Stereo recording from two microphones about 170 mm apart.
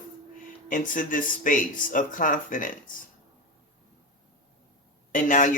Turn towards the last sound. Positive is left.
turn(degrees=50)  # may be behind; listen again after turning